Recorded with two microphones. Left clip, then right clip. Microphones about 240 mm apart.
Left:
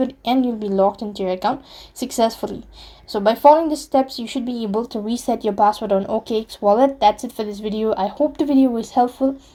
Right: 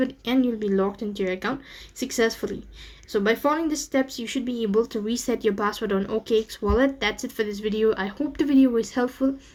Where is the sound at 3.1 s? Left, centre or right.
Centre.